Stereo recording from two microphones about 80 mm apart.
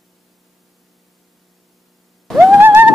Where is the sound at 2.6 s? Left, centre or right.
Right.